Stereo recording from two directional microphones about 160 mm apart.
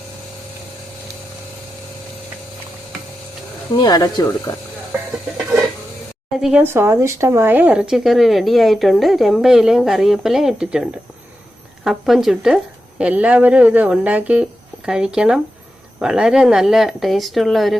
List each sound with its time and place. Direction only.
3.8 s speech: 25° left (ahead or behind)
6.3 s a woman's voice: 5° right (ahead or behind)